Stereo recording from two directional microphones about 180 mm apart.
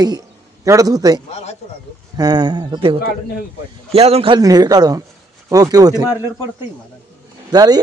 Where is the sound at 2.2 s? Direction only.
25° right (ahead or behind).